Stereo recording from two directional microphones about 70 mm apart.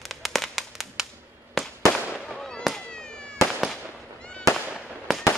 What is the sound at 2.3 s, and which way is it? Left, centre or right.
Fireworks, centre.